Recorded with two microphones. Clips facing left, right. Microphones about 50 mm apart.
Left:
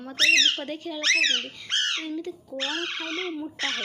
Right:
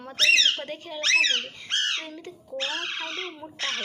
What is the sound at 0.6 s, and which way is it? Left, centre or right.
A woman's voice, right.